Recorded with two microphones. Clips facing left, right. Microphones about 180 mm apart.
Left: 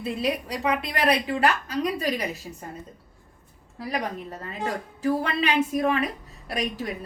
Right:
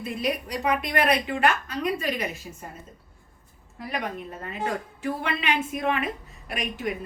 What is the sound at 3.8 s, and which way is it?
A woman's voice, 35° left (ahead or behind).